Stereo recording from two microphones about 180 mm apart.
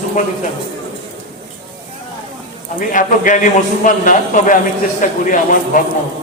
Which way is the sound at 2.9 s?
45° left (ahead or behind).